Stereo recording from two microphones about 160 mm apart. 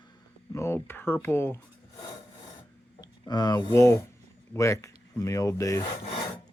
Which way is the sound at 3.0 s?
25° left (ahead or behind).